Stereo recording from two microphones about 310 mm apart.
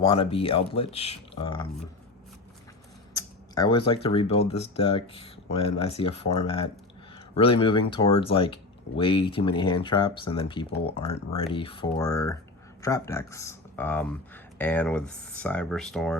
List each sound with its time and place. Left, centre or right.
0.0 s speech: centre
3.2 s speech: centre